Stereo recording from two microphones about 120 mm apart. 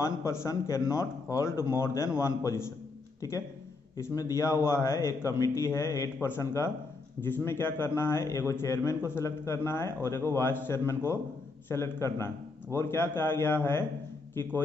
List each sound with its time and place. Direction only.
0.0 s a man's voice: 25° left (ahead or behind)